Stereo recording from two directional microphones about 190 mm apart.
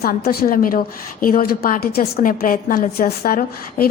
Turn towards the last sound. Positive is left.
turn(degrees=50)  # may be behind; listen again after turning